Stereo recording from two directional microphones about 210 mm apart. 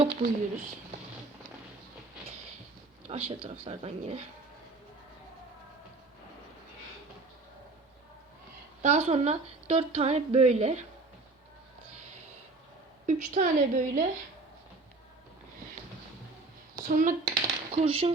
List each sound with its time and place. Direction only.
0.0 s a sound: 30° right (ahead or behind)
3.1 s speech: 25° right (ahead or behind)
8.8 s a woman's voice: 30° right (ahead or behind)
13.1 s a woman's voice: 35° right (ahead or behind)
16.7 s speech: 40° right (ahead or behind)
17.7 s speech: 30° right (ahead or behind)